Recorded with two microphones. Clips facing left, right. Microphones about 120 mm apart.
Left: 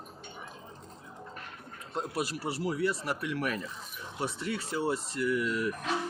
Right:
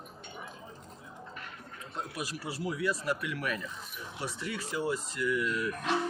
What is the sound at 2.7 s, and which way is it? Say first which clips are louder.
Speech: even; 35° left (ahead or behind).